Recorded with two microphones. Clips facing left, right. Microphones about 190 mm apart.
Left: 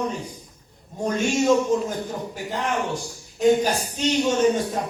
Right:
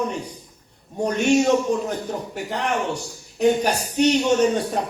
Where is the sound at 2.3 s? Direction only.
70° right (ahead or behind).